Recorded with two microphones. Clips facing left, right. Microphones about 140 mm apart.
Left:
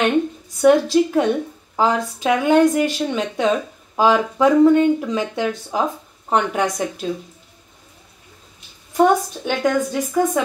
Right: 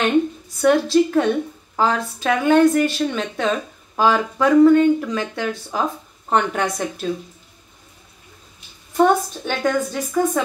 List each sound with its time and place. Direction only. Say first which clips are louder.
0.6 s speech: left 2 dB; 15° left (ahead or behind)
8.9 s speech: left 1 dB; 15° left (ahead or behind)